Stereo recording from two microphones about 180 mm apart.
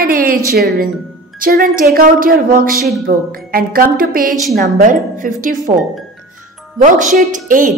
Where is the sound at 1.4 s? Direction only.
50° right (ahead or behind).